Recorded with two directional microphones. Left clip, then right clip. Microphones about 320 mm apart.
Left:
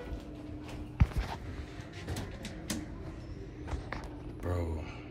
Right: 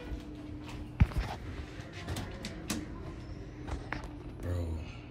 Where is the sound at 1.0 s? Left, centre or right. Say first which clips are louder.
Right 1 dB; centre.